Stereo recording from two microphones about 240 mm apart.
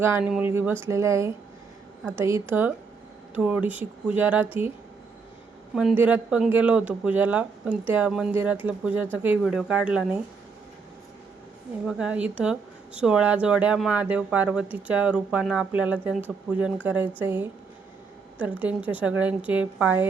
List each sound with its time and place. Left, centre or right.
0.0 s a woman's voice: centre
5.7 s speech: centre
11.9 s a woman's voice: centre